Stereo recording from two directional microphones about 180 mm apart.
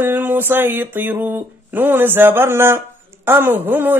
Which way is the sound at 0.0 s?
10° right (ahead or behind).